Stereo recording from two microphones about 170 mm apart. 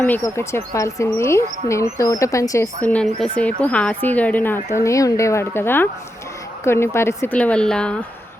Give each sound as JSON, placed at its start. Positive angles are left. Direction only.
{"t": 0.0, "sound": "speech", "side_deg": 15}